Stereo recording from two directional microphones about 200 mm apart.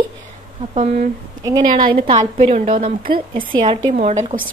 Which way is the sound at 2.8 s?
45° right (ahead or behind).